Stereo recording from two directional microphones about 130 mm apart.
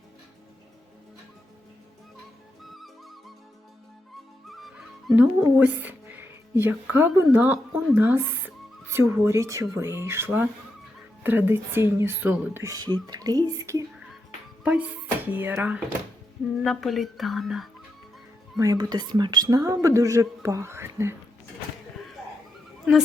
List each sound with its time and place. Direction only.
2.6 s music: centre (ahead or behind)
4.4 s music: centre (ahead or behind)
5.1 s speech: 15° right (ahead or behind)
14.6 s speech: 10° right (ahead or behind)
16.6 s speech: centre (ahead or behind)
18.6 s speech: 30° right (ahead or behind)